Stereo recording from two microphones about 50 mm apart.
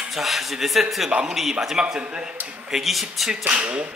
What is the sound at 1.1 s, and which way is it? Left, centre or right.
Speech, centre.